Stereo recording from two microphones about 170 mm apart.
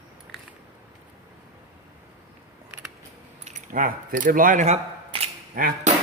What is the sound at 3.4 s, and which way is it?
Keys jangling, 50° right (ahead or behind).